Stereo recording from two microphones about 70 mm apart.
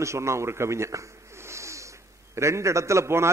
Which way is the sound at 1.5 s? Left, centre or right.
Right.